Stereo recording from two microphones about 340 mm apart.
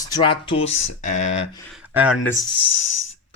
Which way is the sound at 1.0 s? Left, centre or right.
Left.